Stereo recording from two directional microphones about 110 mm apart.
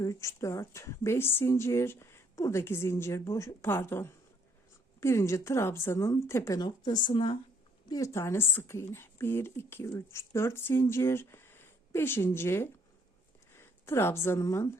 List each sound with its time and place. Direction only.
0.0 s speech: 30° left (ahead or behind)
6.6 s speech: 40° left (ahead or behind)
7.9 s speech: 30° left (ahead or behind)